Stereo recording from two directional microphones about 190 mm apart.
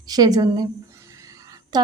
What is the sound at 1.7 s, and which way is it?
Speech, 20° right (ahead or behind).